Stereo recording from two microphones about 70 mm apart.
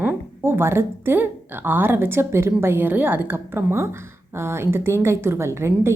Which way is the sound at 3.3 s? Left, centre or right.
Right.